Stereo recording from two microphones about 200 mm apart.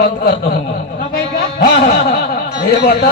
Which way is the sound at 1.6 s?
50° left (ahead or behind).